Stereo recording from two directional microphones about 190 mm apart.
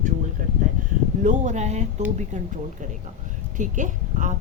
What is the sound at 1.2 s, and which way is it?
Speech, 40° right (ahead or behind).